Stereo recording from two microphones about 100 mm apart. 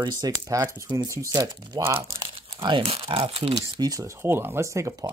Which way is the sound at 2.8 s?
65° right (ahead or behind).